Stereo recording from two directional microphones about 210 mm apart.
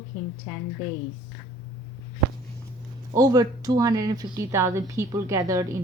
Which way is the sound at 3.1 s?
15° right (ahead or behind).